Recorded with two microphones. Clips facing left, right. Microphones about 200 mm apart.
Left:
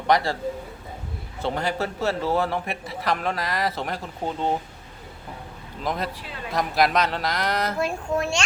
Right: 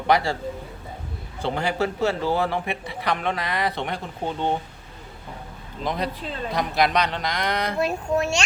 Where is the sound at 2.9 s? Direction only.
Centre (ahead or behind).